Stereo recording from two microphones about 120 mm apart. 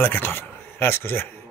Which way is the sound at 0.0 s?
15° left (ahead or behind).